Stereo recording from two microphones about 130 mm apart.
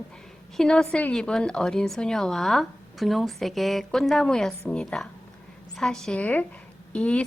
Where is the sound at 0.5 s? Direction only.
5° left (ahead or behind).